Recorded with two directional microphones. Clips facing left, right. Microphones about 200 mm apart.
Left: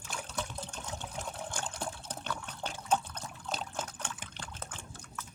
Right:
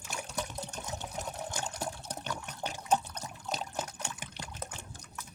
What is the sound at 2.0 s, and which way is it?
Liquid, 10° right (ahead or behind).